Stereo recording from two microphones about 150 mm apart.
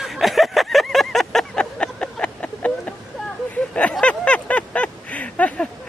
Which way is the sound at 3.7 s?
10° left (ahead or behind).